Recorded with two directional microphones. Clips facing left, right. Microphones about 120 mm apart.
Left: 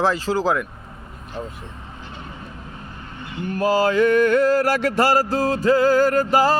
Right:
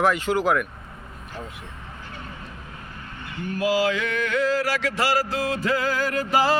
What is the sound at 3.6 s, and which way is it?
Music, 50° left (ahead or behind).